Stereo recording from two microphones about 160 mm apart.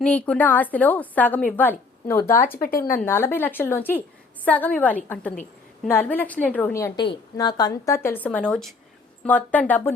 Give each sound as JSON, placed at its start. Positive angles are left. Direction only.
{"t": 0.0, "sound": "a woman's voice", "side_deg": 5}
{"t": 2.6, "sound": "speech", "side_deg": 65}
{"t": 3.0, "sound": "a woman's voice", "side_deg": 15}
{"t": 7.0, "sound": "a woman's voice", "side_deg": 30}